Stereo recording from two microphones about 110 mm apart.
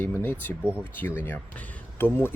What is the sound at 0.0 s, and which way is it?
Speech, 20° left (ahead or behind).